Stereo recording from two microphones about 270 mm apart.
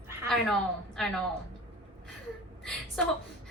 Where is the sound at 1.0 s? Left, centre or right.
Centre.